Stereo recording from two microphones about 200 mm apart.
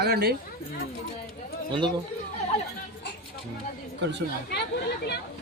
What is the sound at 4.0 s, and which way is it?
Speech, 60° right (ahead or behind).